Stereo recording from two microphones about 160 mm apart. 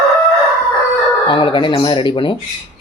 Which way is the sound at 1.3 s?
30° left (ahead or behind).